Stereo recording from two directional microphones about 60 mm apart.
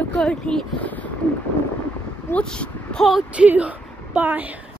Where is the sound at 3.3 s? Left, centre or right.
Right.